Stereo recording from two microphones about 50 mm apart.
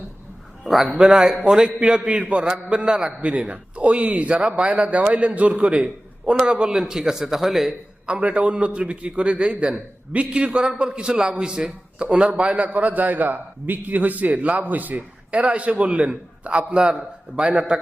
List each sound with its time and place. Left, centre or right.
0.6 s a sound: centre
0.9 s a man's voice: centre
3.2 s a man's voice: right; by 7.7 s centre
8.0 s a man's voice: right